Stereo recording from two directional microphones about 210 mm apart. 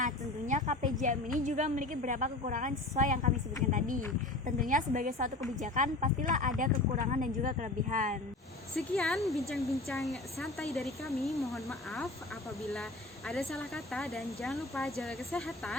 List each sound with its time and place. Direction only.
0.0 s a woman's voice: 35° right (ahead or behind)
8.7 s speech: centre (ahead or behind)